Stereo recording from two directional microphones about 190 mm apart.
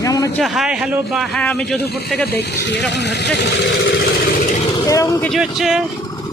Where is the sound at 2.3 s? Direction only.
60° left (ahead or behind).